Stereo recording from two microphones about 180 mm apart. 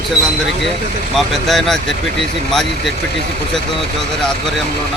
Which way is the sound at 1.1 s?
Centre (ahead or behind).